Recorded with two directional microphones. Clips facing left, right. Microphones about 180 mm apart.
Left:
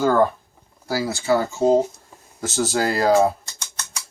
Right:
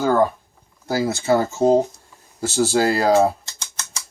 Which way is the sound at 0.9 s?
20° right (ahead or behind).